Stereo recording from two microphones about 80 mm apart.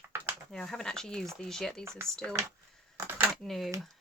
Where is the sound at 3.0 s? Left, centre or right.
Right.